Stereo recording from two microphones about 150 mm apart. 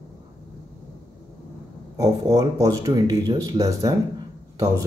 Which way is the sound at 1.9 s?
25° right (ahead or behind).